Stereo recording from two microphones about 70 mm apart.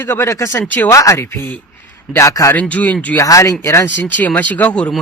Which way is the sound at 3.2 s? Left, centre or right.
Left.